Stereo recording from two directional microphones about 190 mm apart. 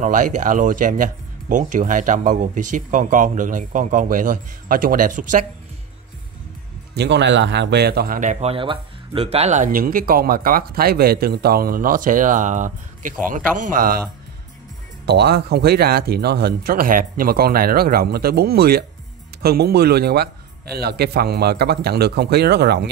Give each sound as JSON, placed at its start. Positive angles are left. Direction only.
{"t": 0.0, "sound": "a man's voice", "side_deg": -40}
{"t": 7.0, "sound": "a man's voice", "side_deg": -65}
{"t": 15.0, "sound": "speech", "side_deg": -60}